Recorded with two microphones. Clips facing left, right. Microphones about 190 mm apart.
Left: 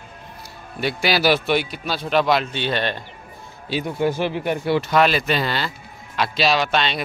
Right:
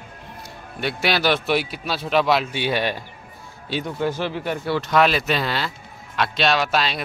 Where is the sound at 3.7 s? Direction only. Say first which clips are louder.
Left 2 dB; 5° left (ahead or behind).